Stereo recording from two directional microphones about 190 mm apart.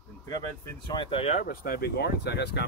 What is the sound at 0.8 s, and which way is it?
Speech, 25° left (ahead or behind).